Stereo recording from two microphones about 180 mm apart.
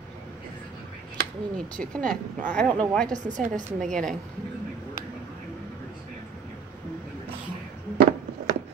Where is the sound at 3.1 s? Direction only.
45° right (ahead or behind).